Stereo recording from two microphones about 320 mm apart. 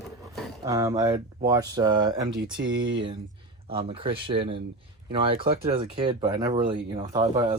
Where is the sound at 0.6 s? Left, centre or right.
Centre.